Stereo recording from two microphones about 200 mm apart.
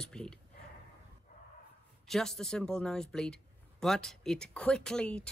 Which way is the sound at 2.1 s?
Centre (ahead or behind).